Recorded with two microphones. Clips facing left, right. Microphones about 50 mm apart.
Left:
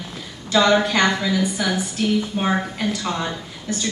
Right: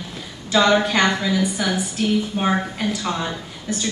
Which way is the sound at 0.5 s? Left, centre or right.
Centre.